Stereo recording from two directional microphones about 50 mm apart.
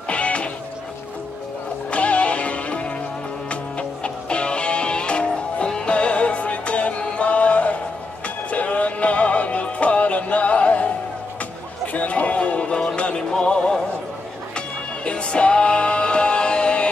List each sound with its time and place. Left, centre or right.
0.1 s music: left
1.9 s music: left
11.9 s music: left
15.0 s music: left